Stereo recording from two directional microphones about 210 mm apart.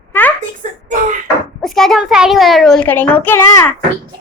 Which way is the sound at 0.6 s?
35° right (ahead or behind).